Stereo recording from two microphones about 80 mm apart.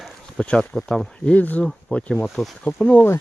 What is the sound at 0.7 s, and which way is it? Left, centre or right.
Speech, centre.